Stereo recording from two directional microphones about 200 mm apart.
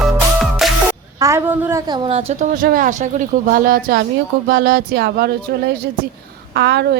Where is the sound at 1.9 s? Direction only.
30° right (ahead or behind).